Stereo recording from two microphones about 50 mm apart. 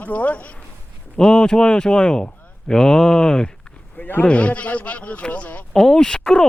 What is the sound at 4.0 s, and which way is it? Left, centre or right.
Speech, left.